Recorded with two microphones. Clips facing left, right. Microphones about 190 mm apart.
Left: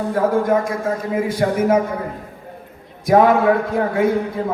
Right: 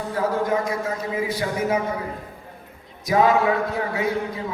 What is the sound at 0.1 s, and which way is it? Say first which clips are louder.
A man's voice: left 5 dB; 50° left (ahead or behind).